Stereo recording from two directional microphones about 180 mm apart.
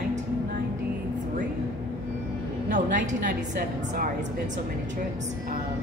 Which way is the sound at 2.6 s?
45° right (ahead or behind).